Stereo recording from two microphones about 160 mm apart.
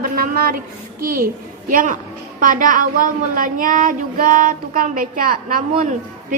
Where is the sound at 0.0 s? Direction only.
65° right (ahead or behind).